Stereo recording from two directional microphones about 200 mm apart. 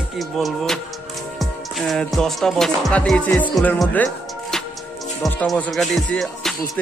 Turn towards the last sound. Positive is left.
turn(degrees=0)  # may be behind; listen again after turning